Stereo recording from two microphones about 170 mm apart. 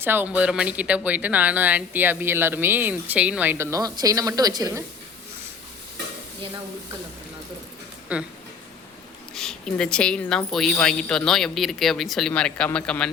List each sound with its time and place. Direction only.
0.0 s a woman's voice: 10° right (ahead or behind)
8.1 s speech: 5° right (ahead or behind)
9.3 s speech: centre (ahead or behind)